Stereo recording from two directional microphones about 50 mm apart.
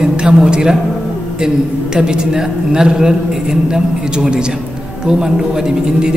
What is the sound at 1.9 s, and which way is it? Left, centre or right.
A man's voice, centre.